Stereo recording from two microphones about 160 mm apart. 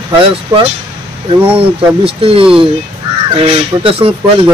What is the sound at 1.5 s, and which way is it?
Speech, 35° right (ahead or behind).